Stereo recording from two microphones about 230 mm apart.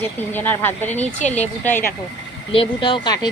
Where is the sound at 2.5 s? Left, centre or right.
Left.